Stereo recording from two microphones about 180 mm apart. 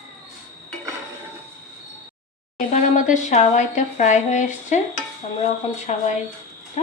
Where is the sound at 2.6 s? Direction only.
45° left (ahead or behind).